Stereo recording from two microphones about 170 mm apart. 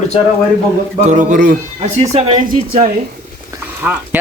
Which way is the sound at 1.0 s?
45° right (ahead or behind).